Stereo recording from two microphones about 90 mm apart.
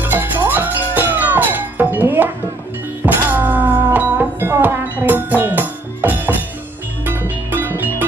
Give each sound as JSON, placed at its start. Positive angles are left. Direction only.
{"t": 0.0, "sound": "music", "side_deg": -20}
{"t": 3.3, "sound": "music", "side_deg": -20}